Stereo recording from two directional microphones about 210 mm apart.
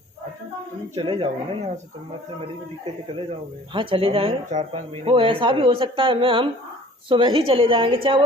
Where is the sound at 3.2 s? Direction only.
25° right (ahead or behind).